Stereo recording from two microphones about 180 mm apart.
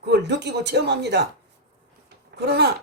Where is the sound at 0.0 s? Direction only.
70° right (ahead or behind).